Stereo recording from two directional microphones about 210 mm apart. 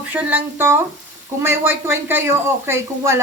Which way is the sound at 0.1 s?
10° right (ahead or behind).